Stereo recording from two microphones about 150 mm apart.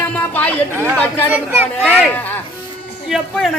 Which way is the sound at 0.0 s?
10° left (ahead or behind).